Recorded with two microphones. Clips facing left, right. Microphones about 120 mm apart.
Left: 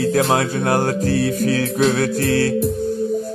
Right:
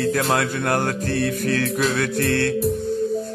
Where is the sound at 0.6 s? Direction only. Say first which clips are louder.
Left 4 dB; 10° left (ahead or behind).